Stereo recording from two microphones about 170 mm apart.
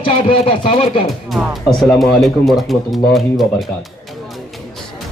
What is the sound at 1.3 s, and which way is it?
Speech, centre (ahead or behind).